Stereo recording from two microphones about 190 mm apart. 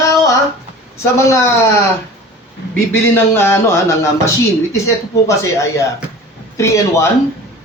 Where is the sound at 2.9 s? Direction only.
10° left (ahead or behind).